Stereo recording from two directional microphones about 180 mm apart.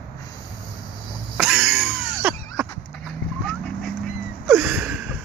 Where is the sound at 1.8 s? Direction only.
5° right (ahead or behind).